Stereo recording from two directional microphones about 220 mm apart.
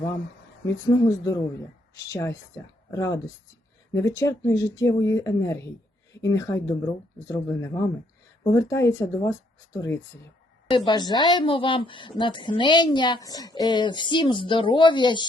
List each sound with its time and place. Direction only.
0.9 s a woman's voice: 15° left (ahead or behind)